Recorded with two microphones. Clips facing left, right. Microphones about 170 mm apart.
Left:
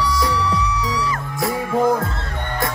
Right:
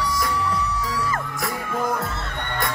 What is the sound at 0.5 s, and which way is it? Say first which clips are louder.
Music: left 4 dB; 50° right (ahead or behind).